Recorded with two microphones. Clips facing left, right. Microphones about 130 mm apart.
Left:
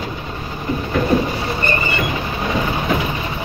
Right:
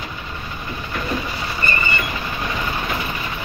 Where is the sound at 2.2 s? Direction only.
25° left (ahead or behind).